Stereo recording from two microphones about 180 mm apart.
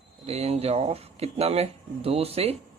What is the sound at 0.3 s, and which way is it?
Speech, 35° right (ahead or behind).